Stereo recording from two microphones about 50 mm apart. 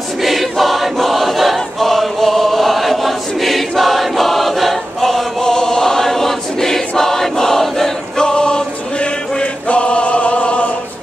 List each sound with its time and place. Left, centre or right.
0.2 s choir: centre
8.2 s choir: centre